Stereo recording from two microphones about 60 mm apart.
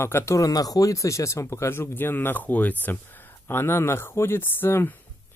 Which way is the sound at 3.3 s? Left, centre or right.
Left.